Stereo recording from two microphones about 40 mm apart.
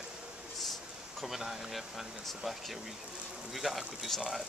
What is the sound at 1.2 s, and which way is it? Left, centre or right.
Speech, centre.